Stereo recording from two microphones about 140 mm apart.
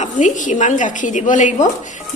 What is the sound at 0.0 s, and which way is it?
A woman's voice, 65° left (ahead or behind).